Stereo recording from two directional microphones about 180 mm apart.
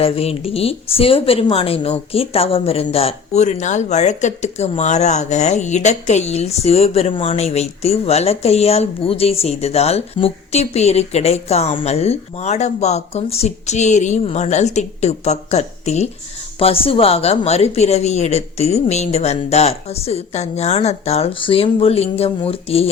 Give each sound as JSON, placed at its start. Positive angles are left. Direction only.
{"t": 0.0, "sound": "a woman's voice", "side_deg": 35}